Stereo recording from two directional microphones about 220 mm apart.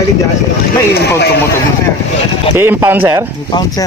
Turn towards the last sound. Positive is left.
turn(degrees=-10)  # may be behind; listen again after turning